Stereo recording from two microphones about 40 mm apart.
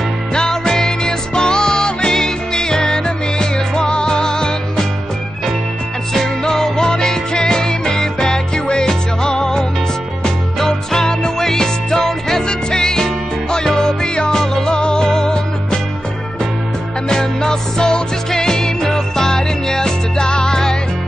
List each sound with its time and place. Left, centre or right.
0.3 s music: centre
6.4 s music: centre
17.1 s music: centre